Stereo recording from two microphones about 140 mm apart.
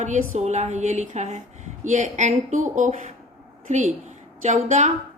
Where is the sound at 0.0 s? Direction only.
55° right (ahead or behind).